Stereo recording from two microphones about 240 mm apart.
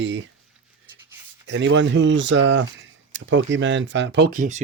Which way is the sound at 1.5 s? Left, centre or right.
Right.